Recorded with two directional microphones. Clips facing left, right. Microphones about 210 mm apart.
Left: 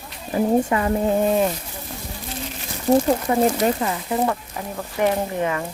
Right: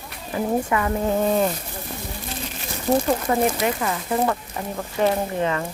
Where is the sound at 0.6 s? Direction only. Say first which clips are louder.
Left 3 dB; 25° left (ahead or behind).